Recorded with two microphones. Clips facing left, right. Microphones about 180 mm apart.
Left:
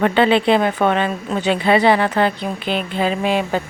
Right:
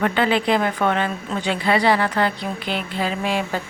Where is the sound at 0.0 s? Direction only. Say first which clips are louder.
Left 5 dB; 25° left (ahead or behind).